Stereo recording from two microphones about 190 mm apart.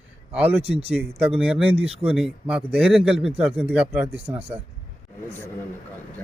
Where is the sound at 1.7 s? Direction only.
30° right (ahead or behind).